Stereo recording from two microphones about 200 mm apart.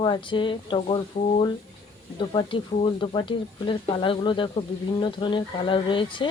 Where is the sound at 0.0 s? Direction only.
25° left (ahead or behind).